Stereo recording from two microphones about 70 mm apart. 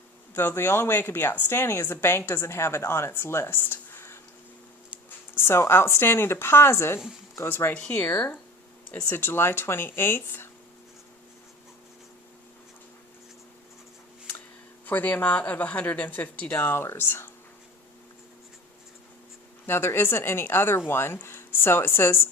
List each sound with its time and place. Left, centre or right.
0.3 s a woman's voice: left
5.3 s a woman's voice: left
7.7 s speech: centre
9.0 s a woman's voice: left
14.8 s speech: left
19.6 s a woman's voice: left